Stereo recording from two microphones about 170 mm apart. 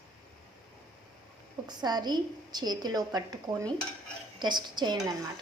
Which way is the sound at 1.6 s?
25° right (ahead or behind).